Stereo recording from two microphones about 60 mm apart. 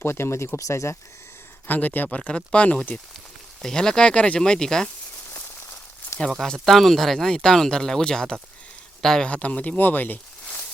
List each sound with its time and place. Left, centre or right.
0.0 s speech: left
1.6 s speech: left; by 4.9 s centre
6.4 s speech: centre
9.3 s speech: left